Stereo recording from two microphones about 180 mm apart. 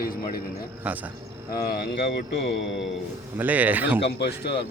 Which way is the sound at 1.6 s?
65° left (ahead or behind).